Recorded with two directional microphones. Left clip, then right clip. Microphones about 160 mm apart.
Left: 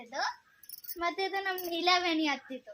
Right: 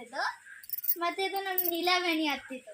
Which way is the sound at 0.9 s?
20° left (ahead or behind).